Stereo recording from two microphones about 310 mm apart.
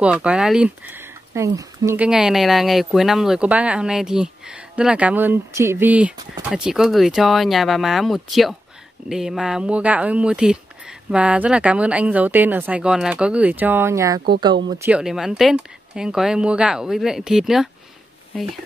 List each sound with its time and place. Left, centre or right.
0.0 s speech: centre